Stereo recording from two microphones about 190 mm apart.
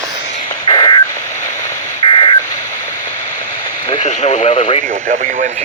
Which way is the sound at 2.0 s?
20° left (ahead or behind).